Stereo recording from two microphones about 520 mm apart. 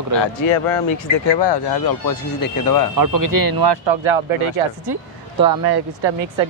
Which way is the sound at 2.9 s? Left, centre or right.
Right.